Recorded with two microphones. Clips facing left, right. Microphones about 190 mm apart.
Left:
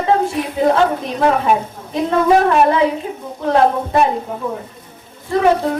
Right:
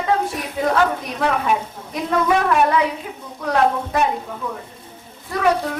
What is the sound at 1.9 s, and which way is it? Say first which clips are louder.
Speech: left 5 dB; 30° left (ahead or behind).